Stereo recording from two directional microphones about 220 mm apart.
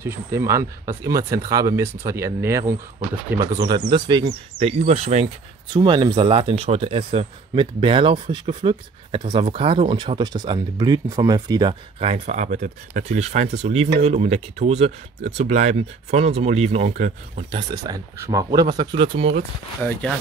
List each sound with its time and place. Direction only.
0.0 s speech: 10° right (ahead or behind)
19.8 s speech: 5° left (ahead or behind)